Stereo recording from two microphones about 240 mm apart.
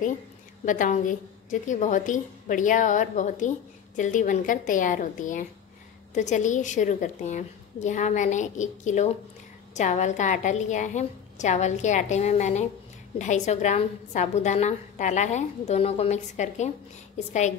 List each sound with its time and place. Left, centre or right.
0.7 s a woman's voice: left